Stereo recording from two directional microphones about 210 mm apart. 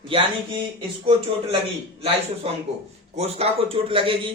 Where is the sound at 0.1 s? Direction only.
25° right (ahead or behind).